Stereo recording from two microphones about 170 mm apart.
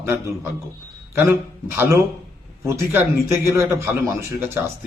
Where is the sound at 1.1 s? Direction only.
15° right (ahead or behind).